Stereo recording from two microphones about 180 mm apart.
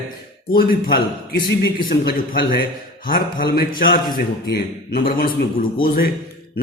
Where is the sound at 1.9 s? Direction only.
55° left (ahead or behind).